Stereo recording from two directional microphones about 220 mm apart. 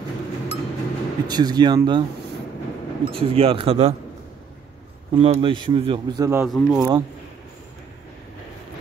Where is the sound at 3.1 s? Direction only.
25° right (ahead or behind).